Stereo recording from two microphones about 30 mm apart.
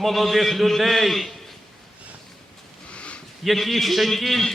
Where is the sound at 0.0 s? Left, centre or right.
Centre.